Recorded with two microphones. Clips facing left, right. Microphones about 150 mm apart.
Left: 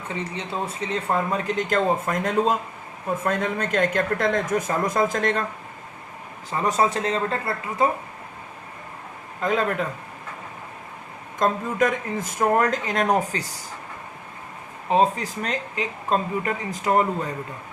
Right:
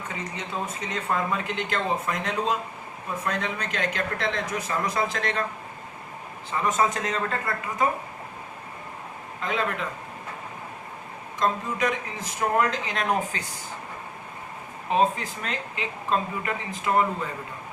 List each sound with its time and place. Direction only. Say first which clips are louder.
0.1 s speech: left 5 dB; 30° left (ahead or behind); by 5.4 s 45° left (ahead or behind)
6.5 s speech: left 2 dB; 35° left (ahead or behind)
9.4 s speech: left 5 dB; 45° left (ahead or behind)
11.3 s speech: left 4 dB; 50° left (ahead or behind)
14.8 s speech: left 3 dB; 35° left (ahead or behind)